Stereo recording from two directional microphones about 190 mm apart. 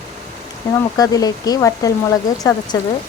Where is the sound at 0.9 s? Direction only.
20° left (ahead or behind).